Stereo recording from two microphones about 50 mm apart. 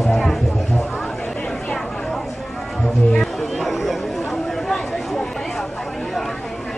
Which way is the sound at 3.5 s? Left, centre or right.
Centre.